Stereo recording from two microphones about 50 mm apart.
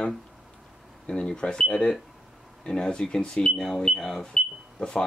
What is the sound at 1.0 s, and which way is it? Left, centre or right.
Speech, centre.